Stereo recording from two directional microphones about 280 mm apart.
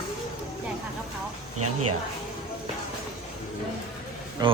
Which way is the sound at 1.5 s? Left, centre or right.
Right.